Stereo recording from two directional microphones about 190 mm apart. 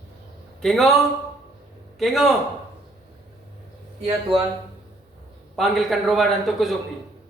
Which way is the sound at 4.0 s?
30° right (ahead or behind).